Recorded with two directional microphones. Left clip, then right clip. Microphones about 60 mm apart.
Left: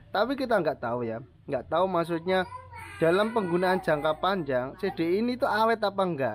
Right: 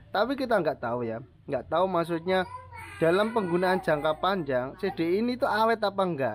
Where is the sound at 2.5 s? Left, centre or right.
Left.